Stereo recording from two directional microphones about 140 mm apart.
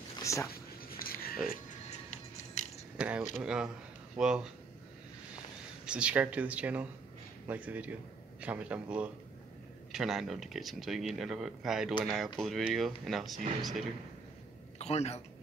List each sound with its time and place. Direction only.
0.2 s a sound: 20° left (ahead or behind)
0.5 s a sound: 90° left
2.0 s music: 60° left (ahead or behind)
3.0 s speech: 10° right (ahead or behind)
5.9 s speech: 10° right (ahead or behind)
14.8 s a man's voice: 50° left (ahead or behind)